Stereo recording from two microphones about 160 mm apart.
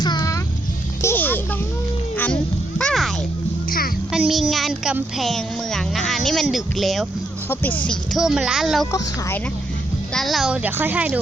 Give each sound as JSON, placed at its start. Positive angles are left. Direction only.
{"t": 0.0, "sound": "music", "side_deg": 25}
{"t": 1.0, "sound": "music", "side_deg": 10}
{"t": 2.1, "sound": "children playing", "side_deg": 10}
{"t": 3.7, "sound": "a sound", "side_deg": 65}
{"t": 4.1, "sound": "speech", "side_deg": 0}
{"t": 10.2, "sound": "a woman's voice", "side_deg": 0}